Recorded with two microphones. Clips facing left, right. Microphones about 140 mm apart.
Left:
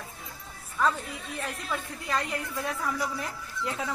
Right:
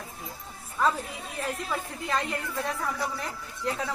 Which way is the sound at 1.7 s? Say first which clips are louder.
Left 1 dB; centre (ahead or behind).